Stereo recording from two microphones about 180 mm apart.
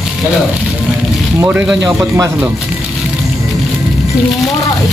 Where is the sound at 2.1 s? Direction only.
15° right (ahead or behind).